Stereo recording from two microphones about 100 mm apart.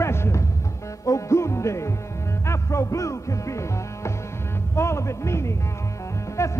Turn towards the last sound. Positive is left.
turn(degrees=30)  # may be behind; listen again after turning